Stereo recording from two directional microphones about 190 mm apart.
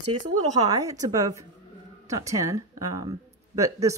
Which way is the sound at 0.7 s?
20° right (ahead or behind).